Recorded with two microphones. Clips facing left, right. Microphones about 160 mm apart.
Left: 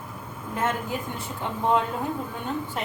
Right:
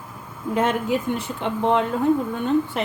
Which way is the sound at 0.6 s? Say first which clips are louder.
Right 6 dB; 85° right.